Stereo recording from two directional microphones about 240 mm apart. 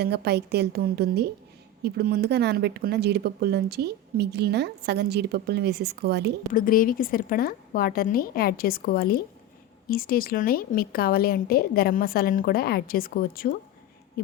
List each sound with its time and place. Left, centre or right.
0.0 s speech: right
6.5 s a woman's voice: left